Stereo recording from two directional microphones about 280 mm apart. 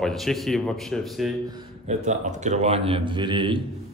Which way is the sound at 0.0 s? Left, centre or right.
Centre.